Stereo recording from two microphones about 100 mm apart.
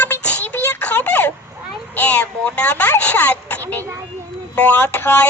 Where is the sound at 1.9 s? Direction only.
15° left (ahead or behind).